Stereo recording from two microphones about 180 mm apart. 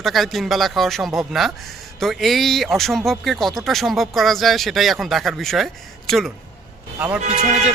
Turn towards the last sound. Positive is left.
turn(degrees=-40)  # may be behind; listen again after turning